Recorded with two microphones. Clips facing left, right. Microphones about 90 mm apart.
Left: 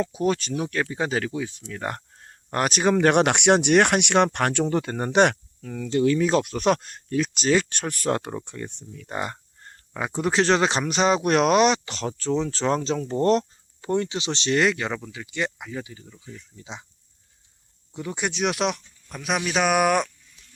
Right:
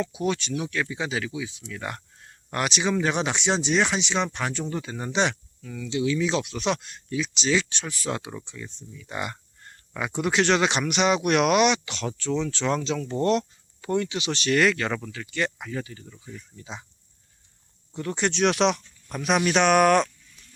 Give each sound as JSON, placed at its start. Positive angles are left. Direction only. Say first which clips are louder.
{"t": 0.0, "sound": "speech", "louder": "left 3 dB", "side_deg": 40}
{"t": 9.1, "sound": "speech", "louder": "left 2 dB", "side_deg": 35}
{"t": 17.9, "sound": "speech", "louder": "right 2 dB", "side_deg": 10}